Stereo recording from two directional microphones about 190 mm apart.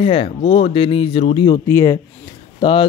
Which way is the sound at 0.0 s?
30° left (ahead or behind).